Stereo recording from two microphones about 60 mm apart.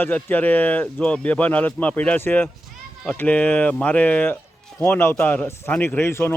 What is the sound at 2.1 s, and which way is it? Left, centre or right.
Speech, left.